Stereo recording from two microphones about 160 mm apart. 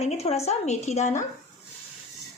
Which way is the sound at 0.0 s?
40° left (ahead or behind).